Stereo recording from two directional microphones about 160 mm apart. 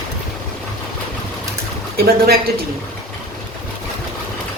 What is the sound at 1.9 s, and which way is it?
Speech, 70° right (ahead or behind).